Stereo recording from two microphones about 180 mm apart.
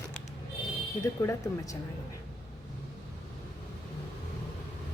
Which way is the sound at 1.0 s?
15° left (ahead or behind).